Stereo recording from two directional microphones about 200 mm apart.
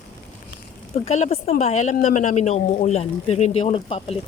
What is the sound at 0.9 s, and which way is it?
A woman's voice, 30° left (ahead or behind).